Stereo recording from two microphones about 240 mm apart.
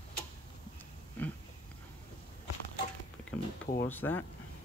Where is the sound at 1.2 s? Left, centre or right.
Centre.